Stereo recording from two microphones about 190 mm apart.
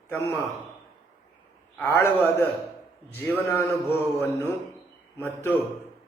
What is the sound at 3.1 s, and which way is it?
A man's voice, 10° left (ahead or behind).